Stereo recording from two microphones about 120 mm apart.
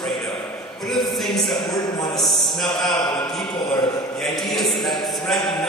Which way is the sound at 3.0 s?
35° left (ahead or behind).